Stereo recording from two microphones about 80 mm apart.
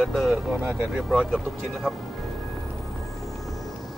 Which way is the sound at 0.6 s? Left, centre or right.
Right.